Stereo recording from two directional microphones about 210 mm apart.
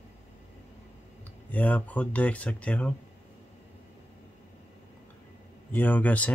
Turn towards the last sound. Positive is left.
turn(degrees=5)  # may be behind; listen again after turning